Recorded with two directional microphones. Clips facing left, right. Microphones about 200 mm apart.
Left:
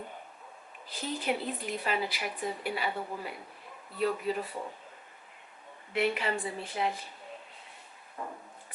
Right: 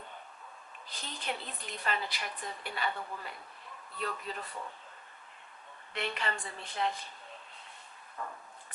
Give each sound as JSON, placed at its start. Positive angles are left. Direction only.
{"t": 0.9, "sound": "a woman's voice", "side_deg": 5}
{"t": 5.9, "sound": "a woman's voice", "side_deg": 5}
{"t": 8.2, "sound": "a sound", "side_deg": 20}